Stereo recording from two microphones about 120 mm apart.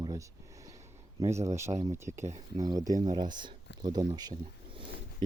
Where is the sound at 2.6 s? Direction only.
30° right (ahead or behind).